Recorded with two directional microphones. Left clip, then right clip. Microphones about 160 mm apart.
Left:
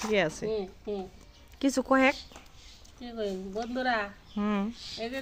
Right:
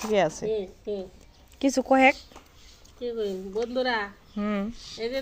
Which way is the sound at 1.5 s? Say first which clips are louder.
Right 4 dB; centre (ahead or behind).